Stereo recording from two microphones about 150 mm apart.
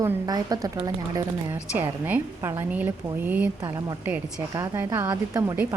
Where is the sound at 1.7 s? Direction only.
10° right (ahead or behind).